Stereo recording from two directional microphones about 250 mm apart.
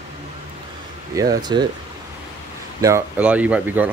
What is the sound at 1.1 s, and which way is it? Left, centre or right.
Speech, centre.